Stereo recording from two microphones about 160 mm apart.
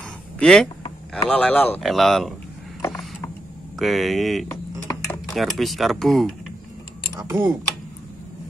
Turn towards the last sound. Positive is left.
turn(degrees=-15)  # may be behind; listen again after turning